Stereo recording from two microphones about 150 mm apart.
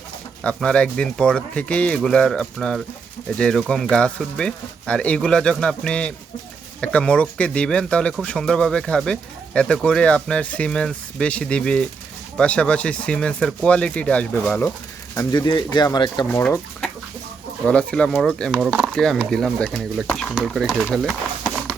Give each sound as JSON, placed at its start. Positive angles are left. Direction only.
{"t": 0.4, "sound": "speech", "side_deg": 5}
{"t": 15.1, "sound": "speech", "side_deg": 20}
{"t": 16.3, "sound": "speech", "side_deg": 10}
{"t": 18.5, "sound": "speech", "side_deg": -10}
{"t": 18.9, "sound": "speech", "side_deg": 5}